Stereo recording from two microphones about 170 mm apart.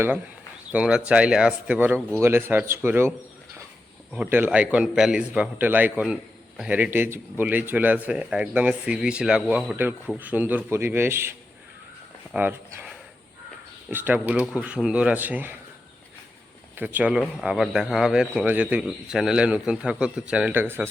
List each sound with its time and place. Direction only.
0.7 s a man's voice: 5° right (ahead or behind)
16.7 s speech: 10° right (ahead or behind)